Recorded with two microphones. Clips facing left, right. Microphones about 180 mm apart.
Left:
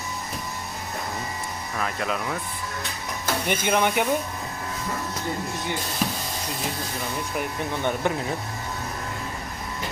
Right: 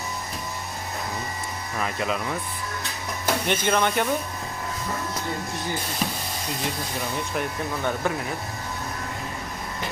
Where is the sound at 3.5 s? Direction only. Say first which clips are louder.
Left 1 dB; 15° left (ahead or behind).